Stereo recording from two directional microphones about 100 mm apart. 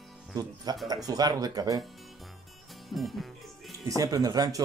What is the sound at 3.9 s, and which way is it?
Speech, 35° right (ahead or behind).